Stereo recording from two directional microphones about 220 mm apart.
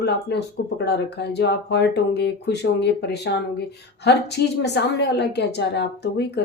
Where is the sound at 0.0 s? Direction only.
50° left (ahead or behind).